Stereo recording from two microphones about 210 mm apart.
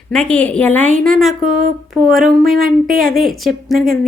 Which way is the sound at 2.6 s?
45° right (ahead or behind).